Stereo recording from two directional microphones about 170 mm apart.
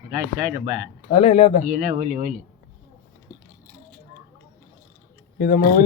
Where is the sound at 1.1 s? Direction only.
35° left (ahead or behind).